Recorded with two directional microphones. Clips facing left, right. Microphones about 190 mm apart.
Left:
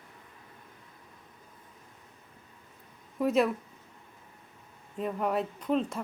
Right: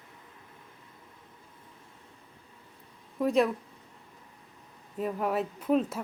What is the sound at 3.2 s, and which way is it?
Speech, centre (ahead or behind).